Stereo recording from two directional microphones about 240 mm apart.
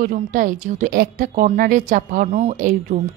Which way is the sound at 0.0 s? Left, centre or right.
Right.